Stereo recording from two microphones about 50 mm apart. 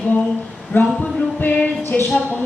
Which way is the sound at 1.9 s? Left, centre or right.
Left.